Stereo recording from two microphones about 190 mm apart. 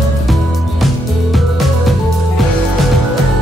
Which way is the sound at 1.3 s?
Centre (ahead or behind).